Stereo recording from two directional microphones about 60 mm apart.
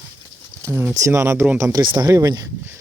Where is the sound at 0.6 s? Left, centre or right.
Right.